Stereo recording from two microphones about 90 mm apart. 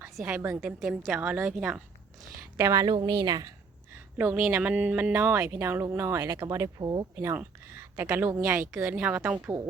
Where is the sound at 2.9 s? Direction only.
60° right (ahead or behind); by 3.6 s 45° right (ahead or behind).